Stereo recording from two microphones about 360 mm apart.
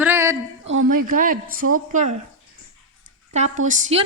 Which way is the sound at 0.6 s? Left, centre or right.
Right.